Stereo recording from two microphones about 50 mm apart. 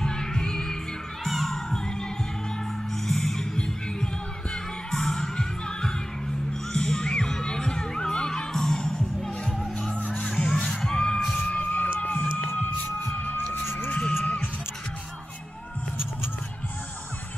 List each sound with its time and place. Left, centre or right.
0.0 s music: centre
1.2 s children shouting: centre
3.1 s music: centre
6.7 s heart sounds: centre
10.2 s music: centre
10.9 s music: centre
11.3 s crowd: left
12.4 s music: left
13.8 s music: left